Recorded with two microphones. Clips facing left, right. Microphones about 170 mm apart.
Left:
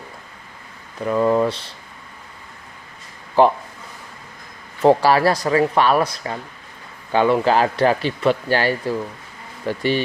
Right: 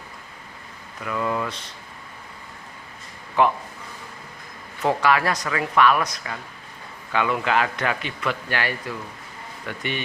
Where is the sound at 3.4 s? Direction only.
35° left (ahead or behind).